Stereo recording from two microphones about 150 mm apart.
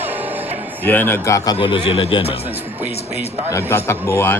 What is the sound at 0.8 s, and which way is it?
Speech, 15° left (ahead or behind).